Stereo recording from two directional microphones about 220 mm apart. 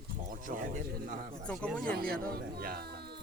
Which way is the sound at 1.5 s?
5° left (ahead or behind).